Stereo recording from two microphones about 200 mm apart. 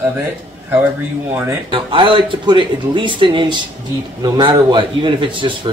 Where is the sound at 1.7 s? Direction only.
25° right (ahead or behind).